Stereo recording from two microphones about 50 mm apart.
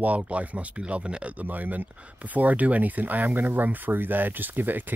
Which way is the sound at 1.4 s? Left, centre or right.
Right.